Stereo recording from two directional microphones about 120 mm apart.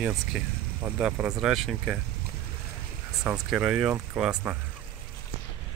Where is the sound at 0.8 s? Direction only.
10° right (ahead or behind).